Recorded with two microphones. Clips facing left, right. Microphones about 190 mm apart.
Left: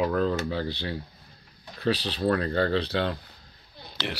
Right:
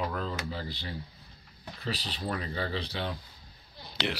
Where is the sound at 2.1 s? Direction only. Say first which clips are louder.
Left 10 dB; 70° left (ahead or behind).